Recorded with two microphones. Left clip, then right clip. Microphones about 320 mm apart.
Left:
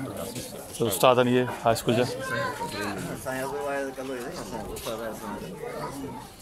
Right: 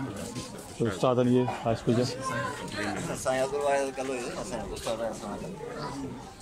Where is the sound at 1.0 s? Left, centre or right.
Left.